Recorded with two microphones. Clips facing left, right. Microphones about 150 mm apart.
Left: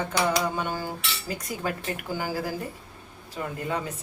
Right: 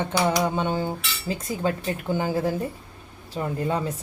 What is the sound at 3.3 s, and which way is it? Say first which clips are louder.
Speech: right 4 dB; 30° right (ahead or behind).